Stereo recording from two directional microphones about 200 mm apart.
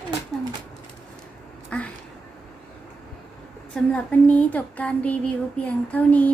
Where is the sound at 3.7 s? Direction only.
5° left (ahead or behind).